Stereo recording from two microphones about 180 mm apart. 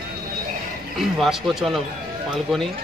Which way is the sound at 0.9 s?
Centre (ahead or behind).